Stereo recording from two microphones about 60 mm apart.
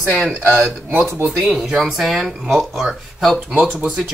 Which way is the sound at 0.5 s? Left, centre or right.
Centre.